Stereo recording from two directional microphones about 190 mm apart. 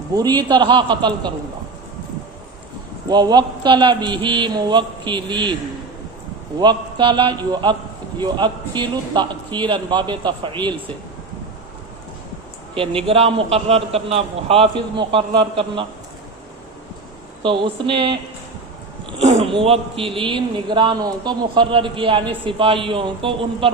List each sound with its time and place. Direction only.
0.1 s a man's voice: 20° right (ahead or behind)
3.1 s a man's voice: 20° right (ahead or behind)
6.6 s a man's voice: 25° right (ahead or behind)
12.7 s a man's voice: 30° right (ahead or behind)
17.4 s a man's voice: 25° right (ahead or behind)
19.2 s a man's voice: 30° right (ahead or behind)